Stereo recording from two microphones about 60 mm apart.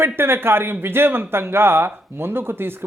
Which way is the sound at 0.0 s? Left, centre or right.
Right.